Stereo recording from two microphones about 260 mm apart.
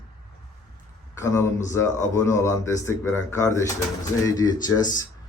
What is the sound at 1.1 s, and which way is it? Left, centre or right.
Speech, centre.